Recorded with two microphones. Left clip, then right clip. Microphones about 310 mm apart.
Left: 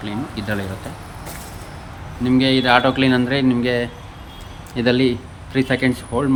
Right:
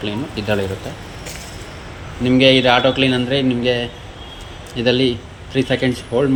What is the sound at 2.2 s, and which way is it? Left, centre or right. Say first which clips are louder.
A man's voice: right 5 dB; centre.